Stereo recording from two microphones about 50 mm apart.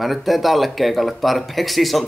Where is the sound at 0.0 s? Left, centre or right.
Centre.